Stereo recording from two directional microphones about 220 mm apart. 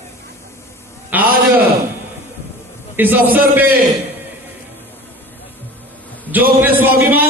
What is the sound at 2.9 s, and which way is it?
Speech, 10° right (ahead or behind).